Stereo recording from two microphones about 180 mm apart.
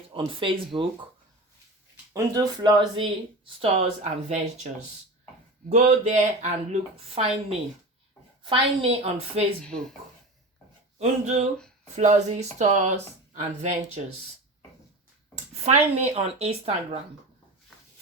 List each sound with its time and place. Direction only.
0.3 s speech: 30° right (ahead or behind)
2.1 s speech: 20° right (ahead or behind)
3.6 s speech: 35° right (ahead or behind)
5.6 s speech: 40° right (ahead or behind)
8.4 s speech: 30° right (ahead or behind)
10.9 s speech: 40° right (ahead or behind)
15.6 s speech: 35° right (ahead or behind)